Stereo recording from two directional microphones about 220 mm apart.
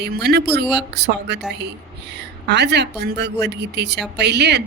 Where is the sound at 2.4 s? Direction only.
50° right (ahead or behind).